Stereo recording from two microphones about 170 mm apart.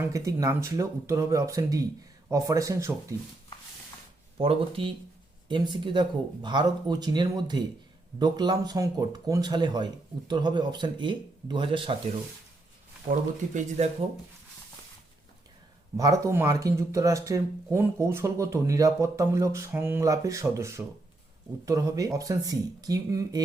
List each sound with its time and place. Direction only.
0.0 s speech: 20° right (ahead or behind)
4.4 s speech: 35° right (ahead or behind)
13.1 s speech: 45° right (ahead or behind)
16.0 s speech: 20° right (ahead or behind)